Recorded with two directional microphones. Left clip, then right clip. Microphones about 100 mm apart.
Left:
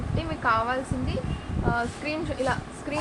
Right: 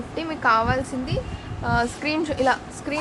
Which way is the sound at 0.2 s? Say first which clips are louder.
Right 5 dB; 65° right (ahead or behind).